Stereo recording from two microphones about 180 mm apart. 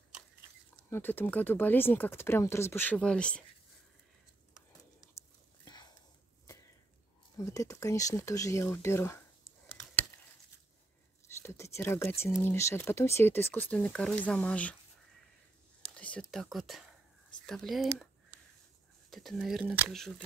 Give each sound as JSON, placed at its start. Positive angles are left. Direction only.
{"t": 0.7, "sound": "speech", "side_deg": 10}
{"t": 7.3, "sound": "speech", "side_deg": 20}
{"t": 8.8, "sound": "a sound", "side_deg": 15}
{"t": 11.4, "sound": "speech", "side_deg": 15}
{"t": 15.8, "sound": "speech", "side_deg": 5}
{"t": 17.3, "sound": "a sound", "side_deg": 0}
{"t": 19.0, "sound": "speech", "side_deg": 0}